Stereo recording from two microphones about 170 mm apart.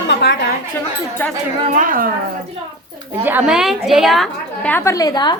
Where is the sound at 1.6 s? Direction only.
50° right (ahead or behind).